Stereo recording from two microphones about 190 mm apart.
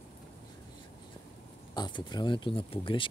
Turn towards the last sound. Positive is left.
turn(degrees=25)  # may be behind; listen again after turning